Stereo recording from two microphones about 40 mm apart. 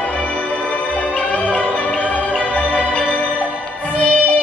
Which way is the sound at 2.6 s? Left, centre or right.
Left.